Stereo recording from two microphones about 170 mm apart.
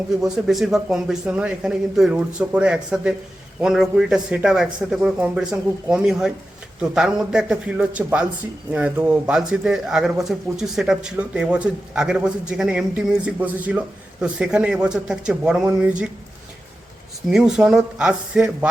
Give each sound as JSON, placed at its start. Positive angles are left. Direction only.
{"t": 0.2, "sound": "speech", "side_deg": -5}
{"t": 17.2, "sound": "speech", "side_deg": -5}